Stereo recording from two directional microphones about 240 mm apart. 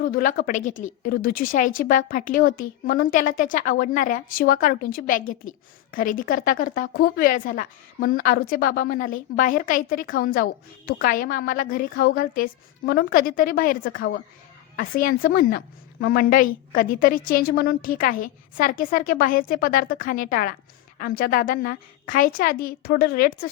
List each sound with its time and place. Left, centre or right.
0.0 s a woman's voice: left